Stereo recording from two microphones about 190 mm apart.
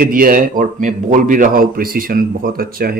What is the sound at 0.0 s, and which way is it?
A man's voice, 50° right (ahead or behind).